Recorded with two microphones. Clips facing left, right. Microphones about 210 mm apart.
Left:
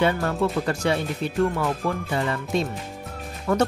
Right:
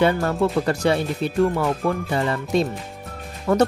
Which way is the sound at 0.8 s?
35° right (ahead or behind).